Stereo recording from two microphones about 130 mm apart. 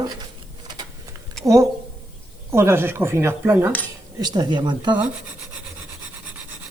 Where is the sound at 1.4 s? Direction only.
5° left (ahead or behind).